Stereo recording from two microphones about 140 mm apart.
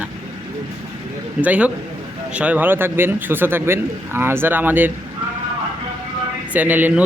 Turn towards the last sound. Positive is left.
turn(degrees=-10)  # may be behind; listen again after turning